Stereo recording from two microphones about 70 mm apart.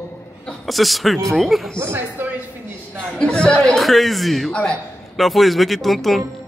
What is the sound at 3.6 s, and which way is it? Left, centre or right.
A man's voice, centre.